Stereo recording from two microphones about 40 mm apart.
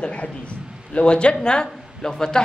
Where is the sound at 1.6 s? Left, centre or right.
Centre.